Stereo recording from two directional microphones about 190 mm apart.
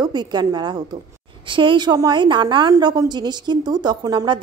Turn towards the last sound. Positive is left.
turn(degrees=-25)  # may be behind; listen again after turning